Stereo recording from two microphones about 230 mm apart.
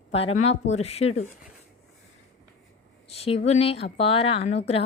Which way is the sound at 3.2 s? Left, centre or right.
Left.